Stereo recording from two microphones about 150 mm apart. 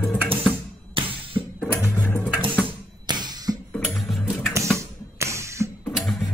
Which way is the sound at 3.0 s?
30° right (ahead or behind).